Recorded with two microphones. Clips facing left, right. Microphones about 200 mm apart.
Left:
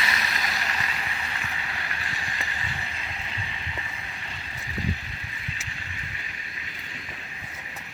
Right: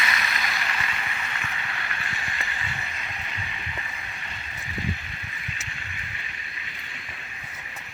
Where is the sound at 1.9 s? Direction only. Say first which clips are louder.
Right 1 dB; 35° left (ahead or behind).